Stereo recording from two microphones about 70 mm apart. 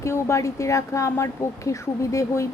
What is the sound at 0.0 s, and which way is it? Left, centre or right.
A woman's voice, left.